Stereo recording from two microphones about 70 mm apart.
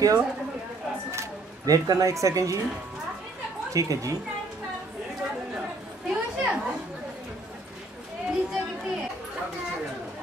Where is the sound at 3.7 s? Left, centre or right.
Right.